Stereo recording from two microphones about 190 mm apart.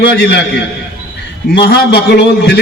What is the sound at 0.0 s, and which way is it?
A man's voice, 60° left (ahead or behind).